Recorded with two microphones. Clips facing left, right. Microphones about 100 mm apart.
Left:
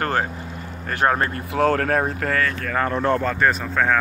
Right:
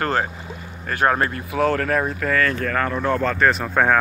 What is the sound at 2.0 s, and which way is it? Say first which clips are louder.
Speech: right 1 dB; 50° left (ahead or behind).